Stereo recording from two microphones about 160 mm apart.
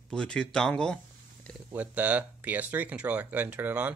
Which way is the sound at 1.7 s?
10° right (ahead or behind).